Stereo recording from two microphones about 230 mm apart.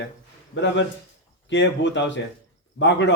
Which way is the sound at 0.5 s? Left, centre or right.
Left.